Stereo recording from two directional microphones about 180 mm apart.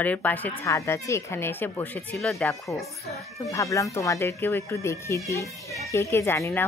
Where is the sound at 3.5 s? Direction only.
15° left (ahead or behind).